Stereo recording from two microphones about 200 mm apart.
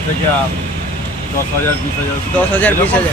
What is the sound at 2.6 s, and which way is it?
Speech, 10° left (ahead or behind).